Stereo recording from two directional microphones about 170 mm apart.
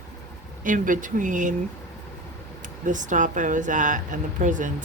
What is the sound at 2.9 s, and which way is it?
Speech, 50° right (ahead or behind).